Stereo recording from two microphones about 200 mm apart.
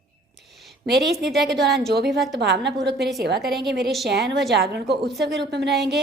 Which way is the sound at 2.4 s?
55° right (ahead or behind).